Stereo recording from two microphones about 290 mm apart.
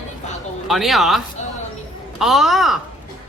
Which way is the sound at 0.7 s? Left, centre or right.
Centre.